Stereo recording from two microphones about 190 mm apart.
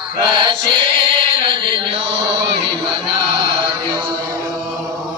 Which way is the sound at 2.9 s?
25° right (ahead or behind).